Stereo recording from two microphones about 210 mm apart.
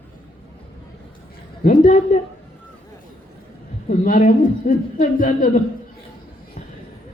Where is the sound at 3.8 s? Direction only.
40° left (ahead or behind).